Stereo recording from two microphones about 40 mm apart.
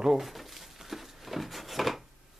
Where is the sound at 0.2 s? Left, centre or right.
Centre.